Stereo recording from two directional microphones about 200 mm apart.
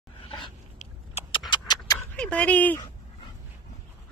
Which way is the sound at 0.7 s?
30° left (ahead or behind).